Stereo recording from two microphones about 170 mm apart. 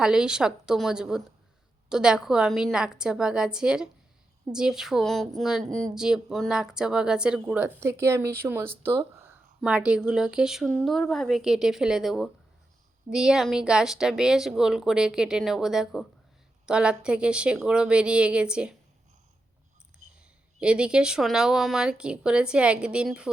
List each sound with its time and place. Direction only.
0.0 s a woman's voice: 5° right (ahead or behind)
20.0 s a sound: 45° right (ahead or behind)
20.6 s a woman's voice: 5° right (ahead or behind)